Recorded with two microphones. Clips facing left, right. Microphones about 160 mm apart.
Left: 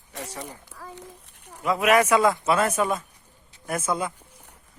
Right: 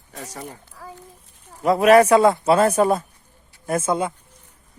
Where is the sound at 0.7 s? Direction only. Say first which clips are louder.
Right 1 dB; 85° left.